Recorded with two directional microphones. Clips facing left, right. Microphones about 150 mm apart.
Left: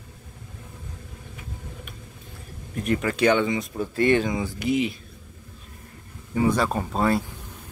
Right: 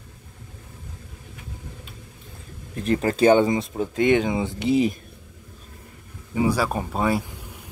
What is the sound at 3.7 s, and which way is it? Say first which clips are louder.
Speech: even; 20° right (ahead or behind).